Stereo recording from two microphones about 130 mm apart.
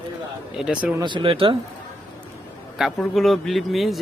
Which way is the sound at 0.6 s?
5° right (ahead or behind).